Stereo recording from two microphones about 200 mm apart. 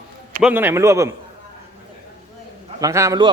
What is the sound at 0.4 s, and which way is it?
Speech, 10° right (ahead or behind).